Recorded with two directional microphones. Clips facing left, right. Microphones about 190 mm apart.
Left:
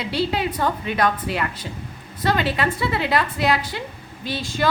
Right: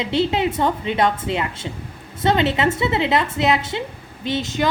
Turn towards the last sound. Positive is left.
turn(degrees=-20)  # may be behind; listen again after turning